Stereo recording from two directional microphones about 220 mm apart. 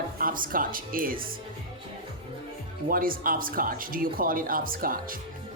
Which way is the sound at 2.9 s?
40° right (ahead or behind).